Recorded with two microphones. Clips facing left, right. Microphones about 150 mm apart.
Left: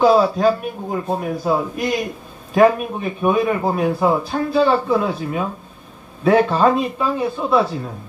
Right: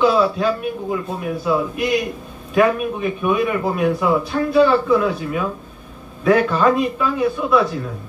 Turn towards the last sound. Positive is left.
turn(degrees=30)  # may be behind; listen again after turning